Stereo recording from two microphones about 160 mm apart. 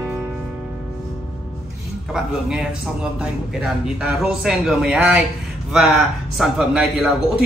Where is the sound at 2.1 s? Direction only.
5° right (ahead or behind).